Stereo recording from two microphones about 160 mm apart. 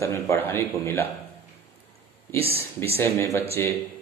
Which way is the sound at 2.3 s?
40° right (ahead or behind).